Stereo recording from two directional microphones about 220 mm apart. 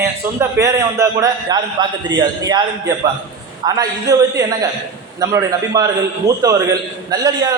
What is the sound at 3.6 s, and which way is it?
A man's voice, 15° right (ahead or behind).